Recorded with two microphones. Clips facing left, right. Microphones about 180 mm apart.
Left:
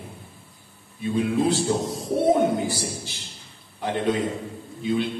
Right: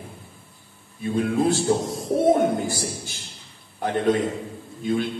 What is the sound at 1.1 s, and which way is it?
Speech, 45° right (ahead or behind).